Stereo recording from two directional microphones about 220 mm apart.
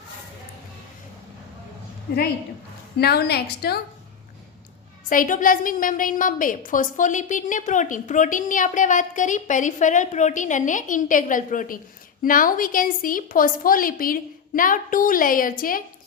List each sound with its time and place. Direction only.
3.0 s a woman's voice: 45° left (ahead or behind)
5.0 s a woman's voice: 40° left (ahead or behind)